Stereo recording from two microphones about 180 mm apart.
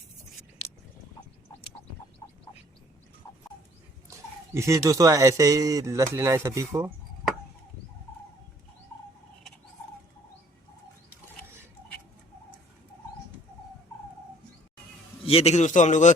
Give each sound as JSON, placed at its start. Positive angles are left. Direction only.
{"t": 4.5, "sound": "speech", "side_deg": -15}
{"t": 15.2, "sound": "a man's voice", "side_deg": 35}